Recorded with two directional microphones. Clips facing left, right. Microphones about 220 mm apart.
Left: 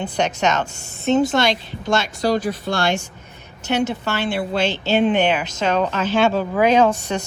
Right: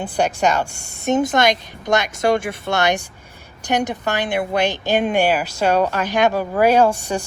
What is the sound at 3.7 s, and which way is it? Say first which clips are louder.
A woman's voice: even; 15° right (ahead or behind).